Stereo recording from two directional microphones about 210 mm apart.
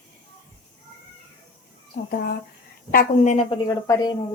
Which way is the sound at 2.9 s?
40° left (ahead or behind).